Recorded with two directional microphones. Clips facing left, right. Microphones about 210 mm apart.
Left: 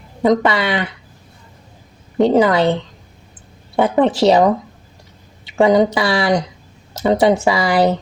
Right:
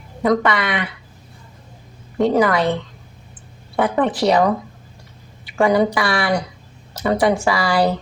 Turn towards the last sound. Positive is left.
turn(degrees=20)  # may be behind; listen again after turning